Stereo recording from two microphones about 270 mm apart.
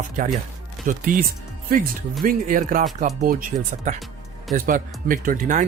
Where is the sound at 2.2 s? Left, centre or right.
Right.